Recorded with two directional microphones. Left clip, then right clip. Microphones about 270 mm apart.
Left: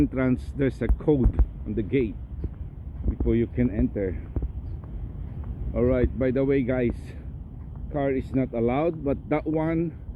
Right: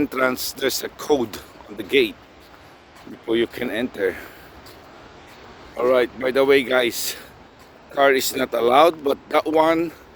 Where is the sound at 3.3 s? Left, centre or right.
Right.